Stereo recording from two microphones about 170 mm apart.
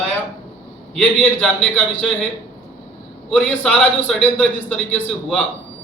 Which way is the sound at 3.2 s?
5° left (ahead or behind).